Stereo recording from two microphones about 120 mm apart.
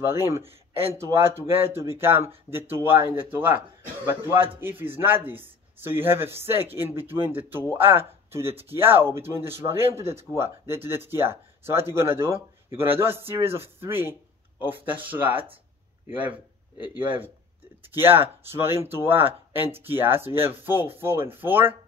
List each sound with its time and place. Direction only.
0.0 s speech: 20° right (ahead or behind)
16.7 s speech: 40° left (ahead or behind)
17.8 s speech: 20° right (ahead or behind)